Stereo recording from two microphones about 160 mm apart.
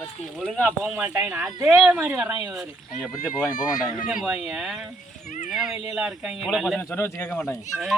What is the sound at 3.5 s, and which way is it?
Speech, 50° left (ahead or behind).